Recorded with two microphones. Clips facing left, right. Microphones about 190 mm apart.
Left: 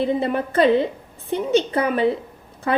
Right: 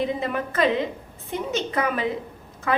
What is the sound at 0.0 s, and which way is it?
A woman's voice, 30° left (ahead or behind).